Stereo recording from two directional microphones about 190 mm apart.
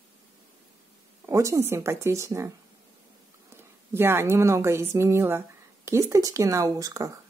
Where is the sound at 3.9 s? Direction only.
10° right (ahead or behind).